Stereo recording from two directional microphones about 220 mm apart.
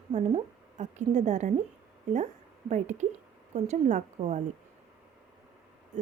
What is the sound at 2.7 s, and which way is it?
Speech, 30° right (ahead or behind).